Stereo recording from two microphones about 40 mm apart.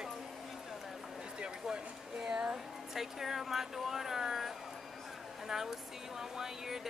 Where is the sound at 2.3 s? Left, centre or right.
Centre.